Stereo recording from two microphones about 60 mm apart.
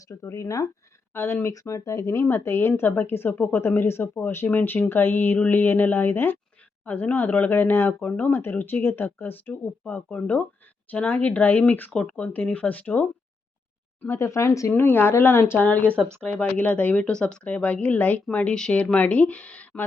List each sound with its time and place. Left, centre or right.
0.1 s speech: left
1.1 s a woman's voice: left
1.5 s speech: left
2.2 s a woman's voice: left
4.0 s speech: left
6.8 s speech: left
8.0 s speech: left
14.1 s speech: left
14.7 s a woman's voice: left
15.5 s speech: left
17.1 s speech: centre